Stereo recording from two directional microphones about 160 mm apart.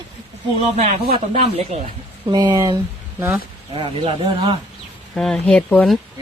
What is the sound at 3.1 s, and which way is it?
Speech, 15° right (ahead or behind).